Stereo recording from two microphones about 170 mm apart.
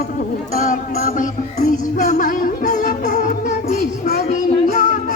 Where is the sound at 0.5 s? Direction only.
50° left (ahead or behind).